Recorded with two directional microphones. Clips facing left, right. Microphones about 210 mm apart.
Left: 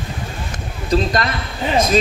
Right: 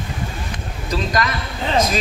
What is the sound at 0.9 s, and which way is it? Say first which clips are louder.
Speech: left 4 dB; 30° left (ahead or behind).